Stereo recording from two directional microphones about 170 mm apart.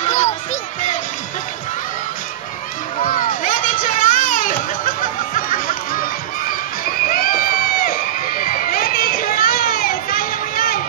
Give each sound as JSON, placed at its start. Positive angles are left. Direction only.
{"t": 0.0, "sound": "music", "side_deg": 45}
{"t": 3.0, "sound": "a sound", "side_deg": 50}
{"t": 7.1, "sound": "crowd", "side_deg": 60}